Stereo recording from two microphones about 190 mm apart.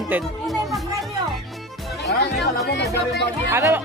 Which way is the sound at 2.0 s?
60° left (ahead or behind).